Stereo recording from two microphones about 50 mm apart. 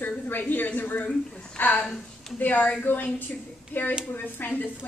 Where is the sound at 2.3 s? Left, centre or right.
Left.